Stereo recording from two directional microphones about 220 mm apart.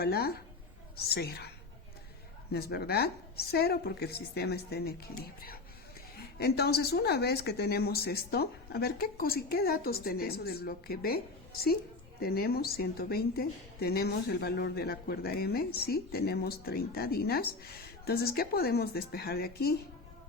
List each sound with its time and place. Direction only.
0.0 s a woman's voice: 45° left (ahead or behind)
2.5 s a woman's voice: 45° left (ahead or behind)